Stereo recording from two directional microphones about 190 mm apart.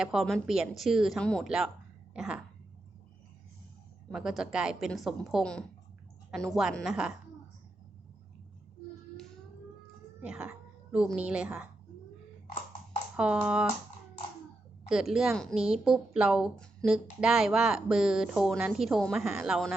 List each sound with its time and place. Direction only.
0.0 s a woman's voice: centre (ahead or behind)
4.1 s a woman's voice: centre (ahead or behind)
10.2 s speech: 5° right (ahead or behind)
13.1 s a woman's voice: 5° right (ahead or behind)
14.8 s a woman's voice: 5° right (ahead or behind)